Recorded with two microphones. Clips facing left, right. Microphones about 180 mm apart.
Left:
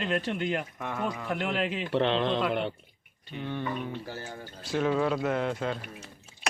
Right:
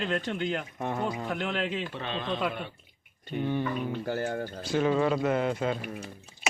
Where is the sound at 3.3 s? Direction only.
50° right (ahead or behind).